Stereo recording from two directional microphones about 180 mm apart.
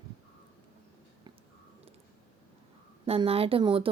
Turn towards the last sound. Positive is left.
turn(degrees=-30)  # may be behind; listen again after turning